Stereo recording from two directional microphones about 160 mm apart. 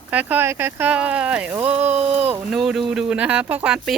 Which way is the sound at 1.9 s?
40° right (ahead or behind).